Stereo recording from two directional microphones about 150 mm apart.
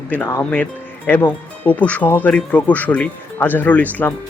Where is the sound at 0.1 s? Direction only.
15° left (ahead or behind).